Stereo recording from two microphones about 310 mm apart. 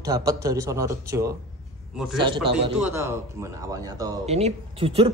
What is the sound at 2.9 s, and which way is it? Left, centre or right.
Speech, centre.